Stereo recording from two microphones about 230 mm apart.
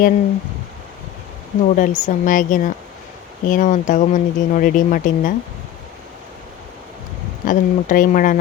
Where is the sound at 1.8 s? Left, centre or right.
Left.